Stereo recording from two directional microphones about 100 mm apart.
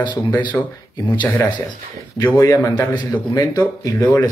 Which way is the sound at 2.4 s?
40° left (ahead or behind).